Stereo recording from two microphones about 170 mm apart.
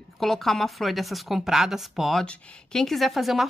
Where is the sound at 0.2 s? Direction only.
Centre (ahead or behind).